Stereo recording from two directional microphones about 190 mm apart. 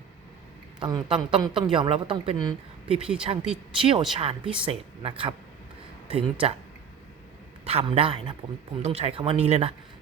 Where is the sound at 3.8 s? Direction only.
30° right (ahead or behind).